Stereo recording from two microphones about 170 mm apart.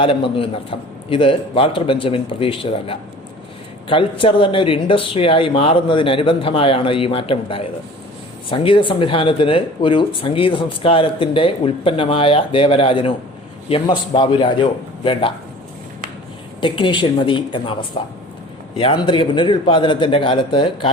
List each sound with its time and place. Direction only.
0.0 s speech: 30° left (ahead or behind)
16.6 s a man's voice: 30° left (ahead or behind)